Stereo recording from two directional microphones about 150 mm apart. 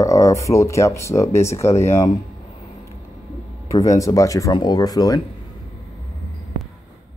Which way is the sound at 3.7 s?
20° left (ahead or behind).